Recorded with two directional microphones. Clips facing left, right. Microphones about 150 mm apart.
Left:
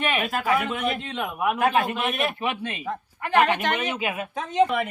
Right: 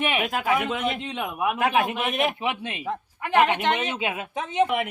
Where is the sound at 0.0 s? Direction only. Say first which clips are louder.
Even; 15° right (ahead or behind).